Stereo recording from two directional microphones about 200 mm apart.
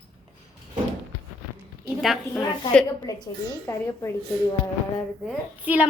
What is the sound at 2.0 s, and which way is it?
Speech, centre (ahead or behind).